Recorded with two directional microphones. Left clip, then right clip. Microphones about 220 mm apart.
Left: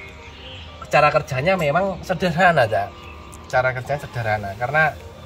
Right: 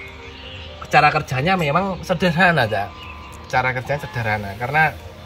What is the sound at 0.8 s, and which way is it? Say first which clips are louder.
Speech: right 1 dB; 20° left (ahead or behind).